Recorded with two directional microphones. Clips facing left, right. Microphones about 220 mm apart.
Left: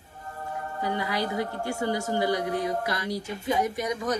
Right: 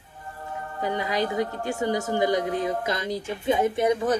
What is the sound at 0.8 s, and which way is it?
A woman's voice, 20° right (ahead or behind).